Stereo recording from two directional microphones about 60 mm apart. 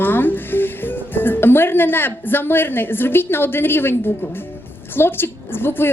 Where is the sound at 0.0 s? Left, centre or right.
Left.